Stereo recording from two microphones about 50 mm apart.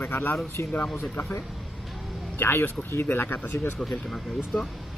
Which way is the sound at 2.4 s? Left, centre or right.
Left.